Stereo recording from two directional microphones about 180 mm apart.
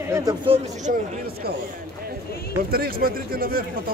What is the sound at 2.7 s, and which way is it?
Speech, 55° right (ahead or behind).